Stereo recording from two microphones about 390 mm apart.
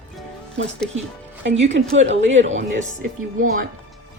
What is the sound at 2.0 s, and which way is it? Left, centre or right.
Speech, right.